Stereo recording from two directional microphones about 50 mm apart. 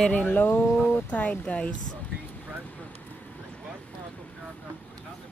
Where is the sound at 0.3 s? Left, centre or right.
Left.